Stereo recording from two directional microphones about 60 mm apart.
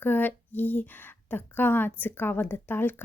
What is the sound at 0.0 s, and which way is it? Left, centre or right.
Speech, left.